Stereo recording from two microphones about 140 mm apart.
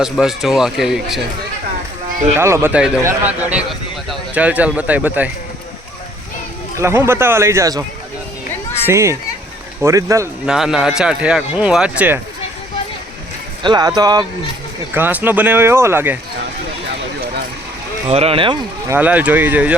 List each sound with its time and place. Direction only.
0.0 s speech: 5° right (ahead or behind)
2.4 s speech: 20° right (ahead or behind)
6.7 s speech: 20° right (ahead or behind)
8.9 s speech: 20° right (ahead or behind)
10.4 s speech: 5° right (ahead or behind)
13.6 s speech: 30° right (ahead or behind)
14.9 s speech: 15° right (ahead or behind)
18.1 s speech: 45° right (ahead or behind)
18.9 s speech: 10° right (ahead or behind)